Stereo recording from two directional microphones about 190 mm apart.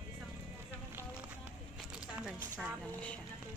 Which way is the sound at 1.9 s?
5° right (ahead or behind).